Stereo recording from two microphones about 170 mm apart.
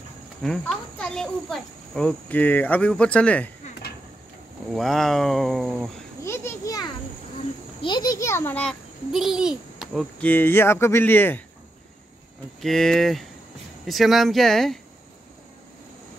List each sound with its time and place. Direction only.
0.4 s speech: 5° left (ahead or behind)
4.7 s speech: centre (ahead or behind)
6.2 s children playing: 15° left (ahead or behind)
7.8 s speech: 25° left (ahead or behind)
9.1 s a child's voice: 5° right (ahead or behind)
10.2 s speech: 10° left (ahead or behind)
12.6 s speech: centre (ahead or behind)